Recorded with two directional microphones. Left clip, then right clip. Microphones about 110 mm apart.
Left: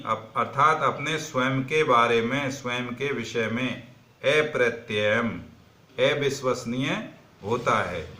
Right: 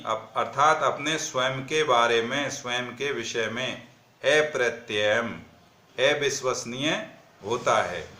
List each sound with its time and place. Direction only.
0.0 s a man's voice: 25° right (ahead or behind)